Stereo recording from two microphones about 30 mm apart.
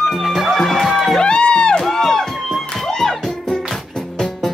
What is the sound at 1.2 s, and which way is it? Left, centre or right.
Music, left.